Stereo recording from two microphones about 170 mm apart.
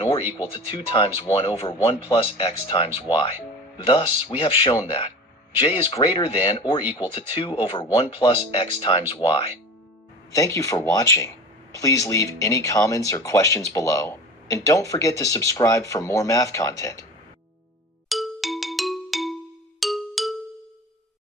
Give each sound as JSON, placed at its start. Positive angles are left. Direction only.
{"t": 0.5, "sound": "speech", "side_deg": 30}
{"t": 10.3, "sound": "speech", "side_deg": 20}
{"t": 18.1, "sound": "music", "side_deg": 0}